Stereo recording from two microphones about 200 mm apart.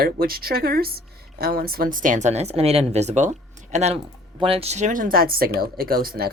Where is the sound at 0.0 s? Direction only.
50° right (ahead or behind).